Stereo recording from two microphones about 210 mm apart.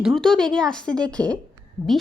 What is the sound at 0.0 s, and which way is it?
Speech, centre (ahead or behind).